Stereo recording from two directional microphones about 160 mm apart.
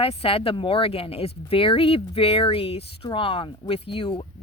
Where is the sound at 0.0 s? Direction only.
35° left (ahead or behind).